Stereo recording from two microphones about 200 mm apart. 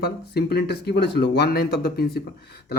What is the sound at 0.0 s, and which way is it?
Speech, 55° left (ahead or behind).